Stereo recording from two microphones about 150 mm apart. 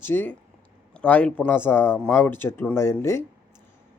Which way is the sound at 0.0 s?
15° left (ahead or behind).